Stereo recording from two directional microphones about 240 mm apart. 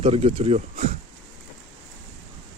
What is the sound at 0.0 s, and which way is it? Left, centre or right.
Speech, right.